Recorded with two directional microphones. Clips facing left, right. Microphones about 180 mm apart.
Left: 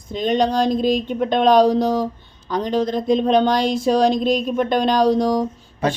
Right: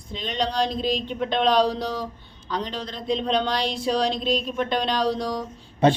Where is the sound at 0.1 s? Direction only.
45° left (ahead or behind).